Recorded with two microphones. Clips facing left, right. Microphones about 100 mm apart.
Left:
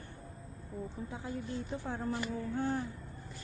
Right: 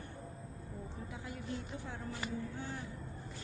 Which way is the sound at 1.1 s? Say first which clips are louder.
Left 3 dB; 30° left (ahead or behind).